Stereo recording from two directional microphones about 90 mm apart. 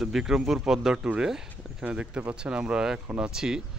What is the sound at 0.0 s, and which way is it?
Speech, 5° right (ahead or behind).